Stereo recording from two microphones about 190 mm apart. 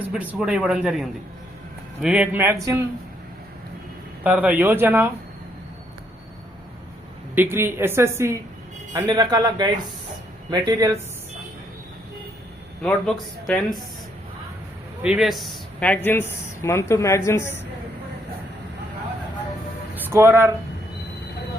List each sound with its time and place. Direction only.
0.1 s speech: 5° right (ahead or behind)
4.2 s speech: 10° right (ahead or behind)
7.3 s speech: 10° right (ahead or behind)
12.8 s speech: 5° left (ahead or behind)
15.0 s a woman's voice: 5° right (ahead or behind); by 17.6 s 15° left (ahead or behind)
20.1 s speech: 15° right (ahead or behind)